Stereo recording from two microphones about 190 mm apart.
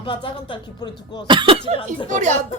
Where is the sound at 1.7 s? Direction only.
30° left (ahead or behind).